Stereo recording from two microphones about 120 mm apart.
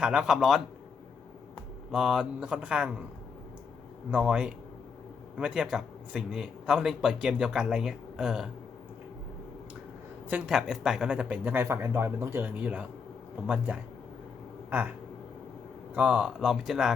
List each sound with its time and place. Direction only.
0.0 s a man's voice: 10° right (ahead or behind)
1.9 s speech: 5° right (ahead or behind)
4.1 s a man's voice: 10° right (ahead or behind)
10.2 s speech: 10° right (ahead or behind)
14.7 s a sound: 10° right (ahead or behind)
16.0 s a man's voice: 10° right (ahead or behind)